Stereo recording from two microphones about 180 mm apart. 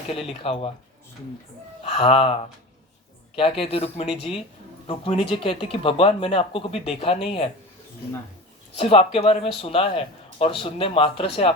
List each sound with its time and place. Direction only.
0.1 s speech: 30° left (ahead or behind)
1.8 s speech: 30° left (ahead or behind)
3.6 s speech: 30° left (ahead or behind)
8.7 s speech: 30° left (ahead or behind)